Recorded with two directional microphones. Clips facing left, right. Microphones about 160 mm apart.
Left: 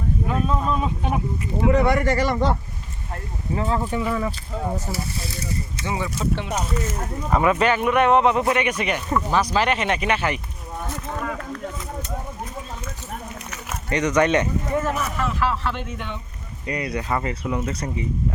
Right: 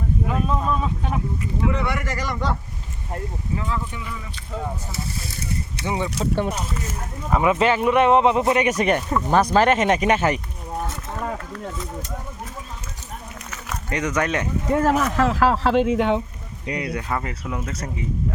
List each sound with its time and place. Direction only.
0.3 s speech: centre (ahead or behind)
0.8 s speech: 15° left (ahead or behind)
1.7 s speech: 35° left (ahead or behind)
5.8 s speech: 15° right (ahead or behind)
7.3 s speech: 5° right (ahead or behind)
7.6 s speech: 25° right (ahead or behind)
8.6 s speech: 40° right (ahead or behind)
13.9 s speech: 5° right (ahead or behind)
14.7 s speech: 90° right
16.6 s speech: 5° right (ahead or behind)